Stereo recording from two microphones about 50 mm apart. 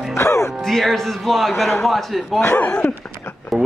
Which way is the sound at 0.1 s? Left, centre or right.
Left.